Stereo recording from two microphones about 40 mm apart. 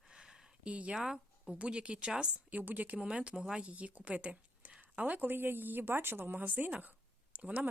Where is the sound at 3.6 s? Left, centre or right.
Right.